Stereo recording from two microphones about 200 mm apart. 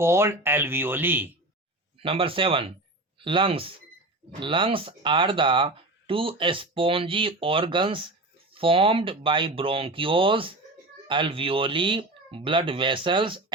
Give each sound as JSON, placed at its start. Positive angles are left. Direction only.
{"t": 0.0, "sound": "speech", "side_deg": -15}
{"t": 2.0, "sound": "speech", "side_deg": -25}